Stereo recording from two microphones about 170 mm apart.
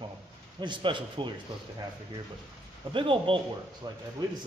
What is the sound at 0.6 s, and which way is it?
Speech, 25° right (ahead or behind).